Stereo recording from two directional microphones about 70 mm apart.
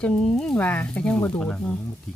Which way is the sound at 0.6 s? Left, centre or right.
Left.